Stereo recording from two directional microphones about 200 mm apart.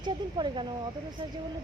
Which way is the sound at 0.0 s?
20° right (ahead or behind).